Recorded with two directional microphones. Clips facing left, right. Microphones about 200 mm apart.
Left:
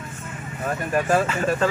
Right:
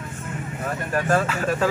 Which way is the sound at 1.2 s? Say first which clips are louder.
Left 1 dB; centre (ahead or behind).